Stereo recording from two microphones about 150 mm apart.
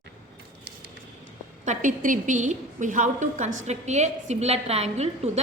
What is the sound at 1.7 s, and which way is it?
A woman's voice, 60° right (ahead or behind).